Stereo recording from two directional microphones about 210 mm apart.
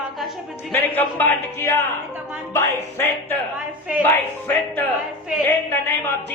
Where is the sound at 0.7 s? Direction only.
10° left (ahead or behind).